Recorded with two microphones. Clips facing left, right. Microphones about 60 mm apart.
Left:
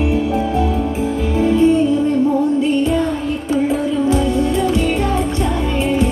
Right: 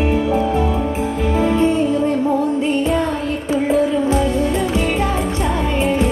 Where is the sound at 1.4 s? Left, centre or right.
Right.